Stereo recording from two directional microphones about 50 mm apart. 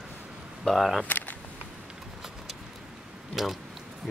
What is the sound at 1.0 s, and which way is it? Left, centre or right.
Speech, left.